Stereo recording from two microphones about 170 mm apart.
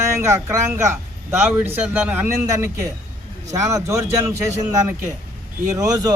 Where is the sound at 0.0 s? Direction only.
15° right (ahead or behind).